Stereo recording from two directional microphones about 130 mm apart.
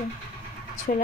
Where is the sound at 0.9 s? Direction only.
90° left.